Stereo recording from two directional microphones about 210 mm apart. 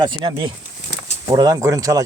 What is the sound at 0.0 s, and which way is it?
Speech, 25° right (ahead or behind).